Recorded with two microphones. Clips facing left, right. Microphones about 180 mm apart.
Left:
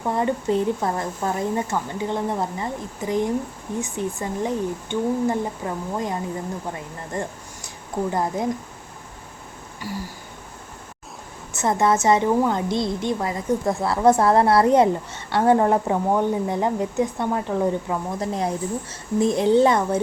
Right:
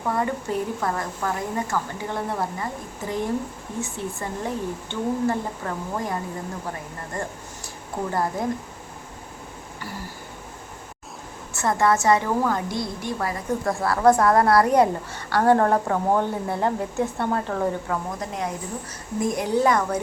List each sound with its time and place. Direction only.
0.1 s a woman's voice: 20° left (ahead or behind)
7.1 s a woman's voice: 20° left (ahead or behind)
9.8 s speech: 15° left (ahead or behind)
11.5 s a woman's voice: 20° left (ahead or behind)
18.2 s a woman's voice: 30° left (ahead or behind)